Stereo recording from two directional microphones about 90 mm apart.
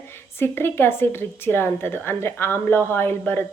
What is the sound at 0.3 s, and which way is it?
A woman's voice, 25° left (ahead or behind).